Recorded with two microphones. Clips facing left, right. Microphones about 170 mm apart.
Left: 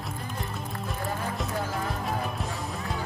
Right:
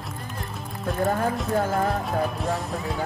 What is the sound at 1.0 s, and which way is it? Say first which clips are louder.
Music: right 8 dB; 50° right (ahead or behind).